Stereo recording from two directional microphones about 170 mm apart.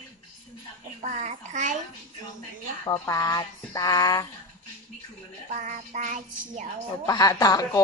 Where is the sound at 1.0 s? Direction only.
45° right (ahead or behind).